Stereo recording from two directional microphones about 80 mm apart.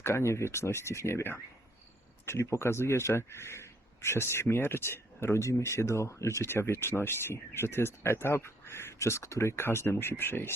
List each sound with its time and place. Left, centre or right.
0.0 s speech: left